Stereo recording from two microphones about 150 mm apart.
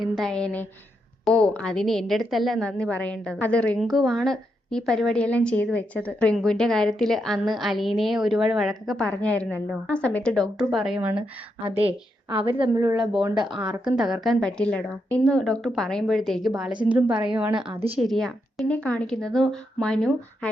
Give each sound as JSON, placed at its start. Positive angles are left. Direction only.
{"t": 0.0, "sound": "a woman's voice", "side_deg": 0}
{"t": 12.3, "sound": "a woman's voice", "side_deg": -35}
{"t": 13.8, "sound": "a woman's voice", "side_deg": -5}
{"t": 17.7, "sound": "a woman's voice", "side_deg": -40}
{"t": 18.0, "sound": "a woman's voice", "side_deg": 0}